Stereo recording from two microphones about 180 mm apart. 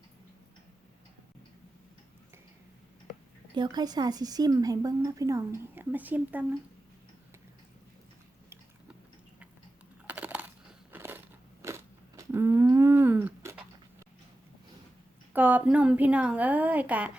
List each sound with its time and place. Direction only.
3.5 s a woman's voice: 25° right (ahead or behind)
10.1 s crushing: 10° right (ahead or behind)
11.6 s a sound: 15° right (ahead or behind)
15.3 s a woman's voice: 10° right (ahead or behind)